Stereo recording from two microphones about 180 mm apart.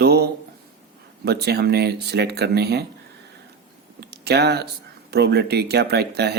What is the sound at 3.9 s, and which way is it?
Speech, 65° right (ahead or behind).